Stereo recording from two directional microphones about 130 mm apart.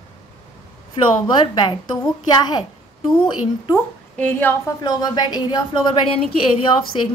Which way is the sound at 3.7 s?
15° left (ahead or behind).